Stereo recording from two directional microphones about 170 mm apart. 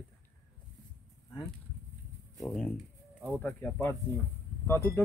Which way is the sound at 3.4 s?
10° left (ahead or behind).